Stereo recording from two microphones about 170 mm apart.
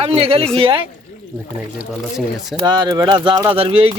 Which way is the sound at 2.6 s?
25° right (ahead or behind).